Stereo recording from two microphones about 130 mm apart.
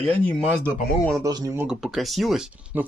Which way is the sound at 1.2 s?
30° right (ahead or behind).